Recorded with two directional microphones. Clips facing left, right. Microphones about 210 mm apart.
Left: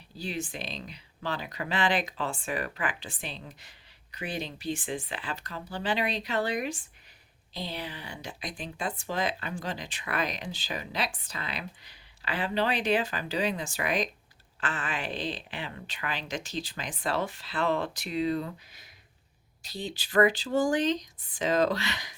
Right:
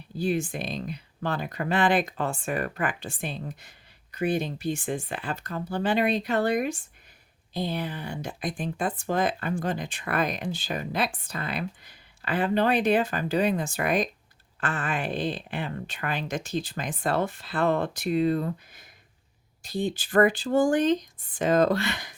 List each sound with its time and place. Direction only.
0.2 s speech: 50° right (ahead or behind)